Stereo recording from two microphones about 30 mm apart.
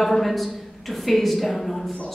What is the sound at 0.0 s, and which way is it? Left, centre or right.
A woman's voice, centre.